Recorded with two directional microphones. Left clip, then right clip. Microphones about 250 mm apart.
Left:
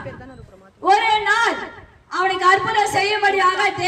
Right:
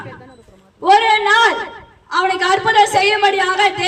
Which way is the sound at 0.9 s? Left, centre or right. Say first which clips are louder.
Right 4 dB; centre.